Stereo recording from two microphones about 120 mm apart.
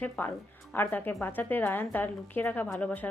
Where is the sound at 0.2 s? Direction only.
15° left (ahead or behind).